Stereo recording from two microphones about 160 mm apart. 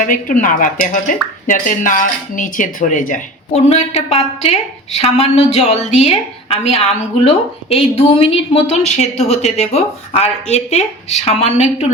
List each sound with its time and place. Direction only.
0.0 s a woman's voice: 55° left (ahead or behind)